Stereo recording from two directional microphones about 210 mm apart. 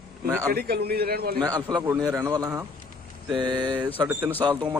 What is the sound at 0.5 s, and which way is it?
Speech, 50° right (ahead or behind).